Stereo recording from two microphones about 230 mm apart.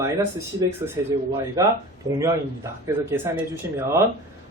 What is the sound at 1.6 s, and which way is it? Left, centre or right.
Speech, centre.